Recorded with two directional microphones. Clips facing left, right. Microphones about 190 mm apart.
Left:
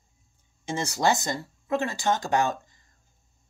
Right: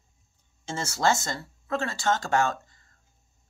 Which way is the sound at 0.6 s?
15° left (ahead or behind).